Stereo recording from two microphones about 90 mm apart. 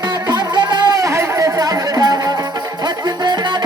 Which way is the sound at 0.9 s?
35° right (ahead or behind).